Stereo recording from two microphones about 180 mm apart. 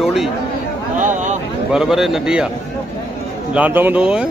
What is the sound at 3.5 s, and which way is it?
Speech, 10° right (ahead or behind).